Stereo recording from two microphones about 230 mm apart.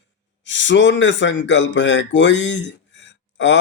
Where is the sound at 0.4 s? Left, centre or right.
Left.